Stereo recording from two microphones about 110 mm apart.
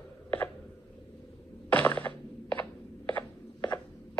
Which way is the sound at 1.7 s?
15° left (ahead or behind).